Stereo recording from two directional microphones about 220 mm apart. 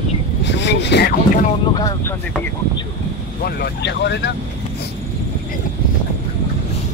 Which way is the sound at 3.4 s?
45° left (ahead or behind).